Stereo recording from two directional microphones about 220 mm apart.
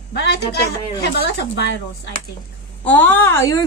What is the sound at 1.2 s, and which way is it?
Speech, 50° left (ahead or behind).